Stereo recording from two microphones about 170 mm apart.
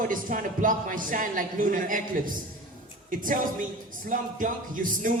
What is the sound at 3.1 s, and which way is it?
Speech, 55° right (ahead or behind).